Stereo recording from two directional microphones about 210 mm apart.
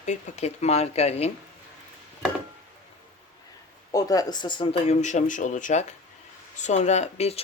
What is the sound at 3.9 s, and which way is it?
Speech, 15° left (ahead or behind).